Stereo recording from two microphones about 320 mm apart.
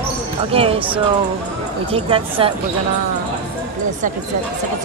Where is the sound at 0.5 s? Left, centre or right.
Centre.